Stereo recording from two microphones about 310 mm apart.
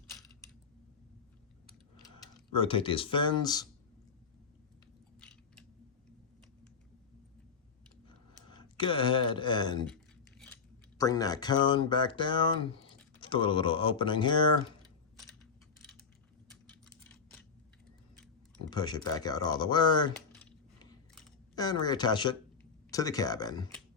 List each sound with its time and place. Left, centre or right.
2.2 s speech: centre
5.2 s chewing: centre
8.0 s a sound: centre
9.8 s speech: centre
18.7 s speech: centre
21.5 s speech: centre